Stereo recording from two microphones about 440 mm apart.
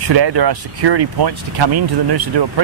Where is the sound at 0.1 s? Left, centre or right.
Right.